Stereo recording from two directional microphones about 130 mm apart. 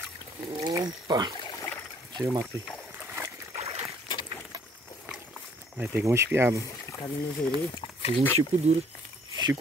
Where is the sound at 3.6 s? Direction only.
50° right (ahead or behind).